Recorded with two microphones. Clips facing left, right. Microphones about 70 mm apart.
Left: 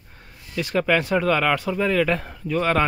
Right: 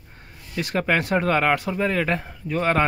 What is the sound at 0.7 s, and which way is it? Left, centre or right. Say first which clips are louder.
Speech: left 1 dB; right.